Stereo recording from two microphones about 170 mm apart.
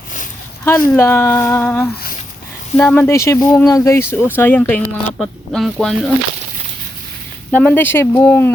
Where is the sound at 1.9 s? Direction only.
65° left (ahead or behind).